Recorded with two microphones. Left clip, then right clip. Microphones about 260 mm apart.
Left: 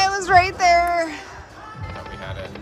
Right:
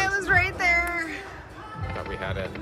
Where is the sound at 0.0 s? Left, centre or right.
Centre.